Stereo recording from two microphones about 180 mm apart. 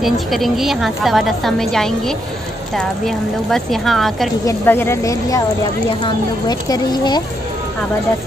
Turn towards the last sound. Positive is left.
turn(degrees=25)  # may be behind; listen again after turning